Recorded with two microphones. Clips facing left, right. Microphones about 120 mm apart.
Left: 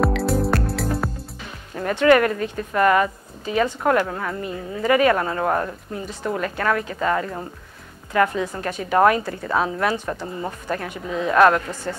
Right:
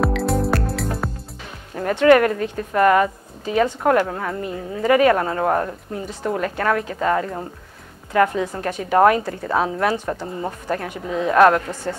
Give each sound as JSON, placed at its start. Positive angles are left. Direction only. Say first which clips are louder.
{"t": 0.0, "sound": "music", "louder": "even", "side_deg": 0}
{"t": 1.8, "sound": "a woman's voice", "louder": "right 2 dB", "side_deg": -40}
{"t": 4.4, "sound": "a woman's voice", "louder": "right 2 dB", "side_deg": -45}